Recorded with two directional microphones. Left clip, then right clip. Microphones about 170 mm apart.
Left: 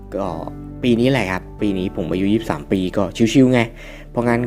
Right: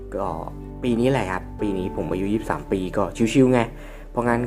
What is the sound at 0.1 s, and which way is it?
Speech, 30° left (ahead or behind).